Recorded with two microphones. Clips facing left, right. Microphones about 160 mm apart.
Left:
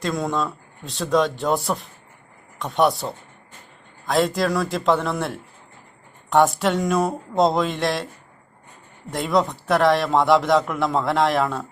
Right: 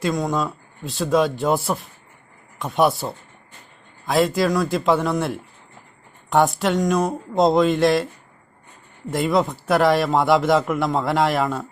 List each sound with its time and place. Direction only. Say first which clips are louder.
0.0 s a man's voice: right 2 dB; centre (ahead or behind)
9.0 s a man's voice: right 1 dB; centre (ahead or behind)